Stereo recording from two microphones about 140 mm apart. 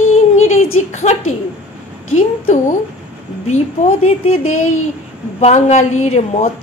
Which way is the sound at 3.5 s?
55° left (ahead or behind).